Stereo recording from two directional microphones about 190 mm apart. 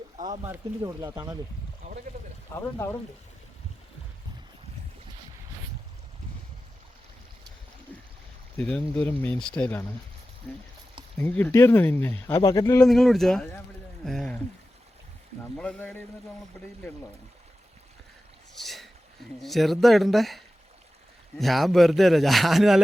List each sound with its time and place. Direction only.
0.3 s speech: 15° right (ahead or behind)
2.6 s speech: 15° left (ahead or behind)
8.5 s speech: 5° left (ahead or behind)
12.8 s a man's voice: centre (ahead or behind)
15.5 s a man's voice: 5° left (ahead or behind)
18.5 s a sound: centre (ahead or behind)
19.4 s a man's voice: centre (ahead or behind)